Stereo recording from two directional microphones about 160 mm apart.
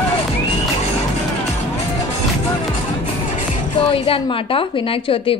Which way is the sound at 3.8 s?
35° left (ahead or behind).